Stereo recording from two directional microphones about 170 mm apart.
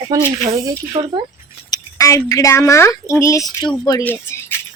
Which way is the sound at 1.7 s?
20° left (ahead or behind).